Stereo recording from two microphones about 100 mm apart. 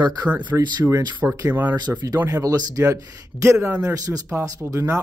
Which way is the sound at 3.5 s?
20° right (ahead or behind).